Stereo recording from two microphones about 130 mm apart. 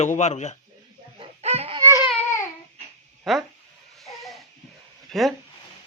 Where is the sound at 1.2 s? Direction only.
55° right (ahead or behind).